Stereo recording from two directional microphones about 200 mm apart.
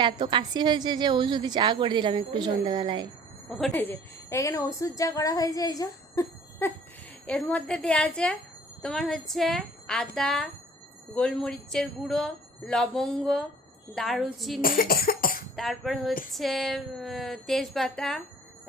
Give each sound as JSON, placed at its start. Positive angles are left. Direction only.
{"t": 0.0, "sound": "a woman's voice", "side_deg": -25}
{"t": 3.8, "sound": "a woman's voice", "side_deg": 10}
{"t": 14.6, "sound": "cough", "side_deg": 45}
{"t": 15.5, "sound": "speech", "side_deg": 0}